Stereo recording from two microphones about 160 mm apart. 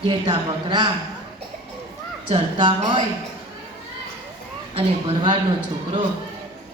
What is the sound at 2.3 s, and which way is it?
Speech, 30° right (ahead or behind).